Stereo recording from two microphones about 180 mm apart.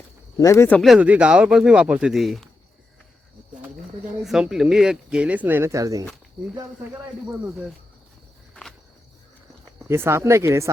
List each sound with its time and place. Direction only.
0.3 s speech: 15° left (ahead or behind)
0.8 s speech: 5° right (ahead or behind)
4.2 s speech: centre (ahead or behind); by 6.1 s 20° right (ahead or behind)
9.7 s speech: 15° right (ahead or behind)